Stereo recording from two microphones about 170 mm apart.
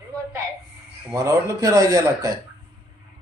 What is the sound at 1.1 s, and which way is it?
Speech, 20° right (ahead or behind).